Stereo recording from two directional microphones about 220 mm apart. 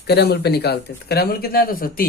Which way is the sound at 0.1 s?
45° left (ahead or behind).